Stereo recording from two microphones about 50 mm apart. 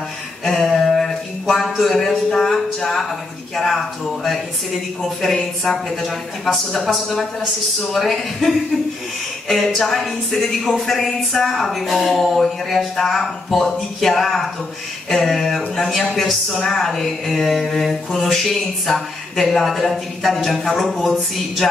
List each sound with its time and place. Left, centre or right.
0.7 s a sound: centre
3.5 s speech: centre
9.8 s speech: centre